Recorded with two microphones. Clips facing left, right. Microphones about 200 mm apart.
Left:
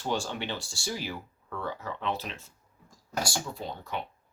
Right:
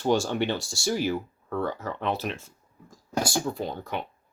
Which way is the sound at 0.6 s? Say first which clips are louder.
Right 8 dB; 75° right (ahead or behind).